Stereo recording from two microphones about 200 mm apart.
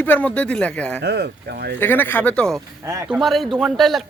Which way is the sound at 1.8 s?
10° left (ahead or behind).